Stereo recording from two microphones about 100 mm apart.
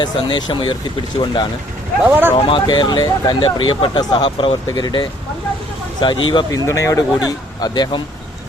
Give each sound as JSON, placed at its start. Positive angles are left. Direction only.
{"t": 0.0, "sound": "speech", "side_deg": 45}
{"t": 2.0, "sound": "speech", "side_deg": -20}
{"t": 2.3, "sound": "speech", "side_deg": 60}
{"t": 2.6, "sound": "speech", "side_deg": 45}
{"t": 6.5, "sound": "speech", "side_deg": 30}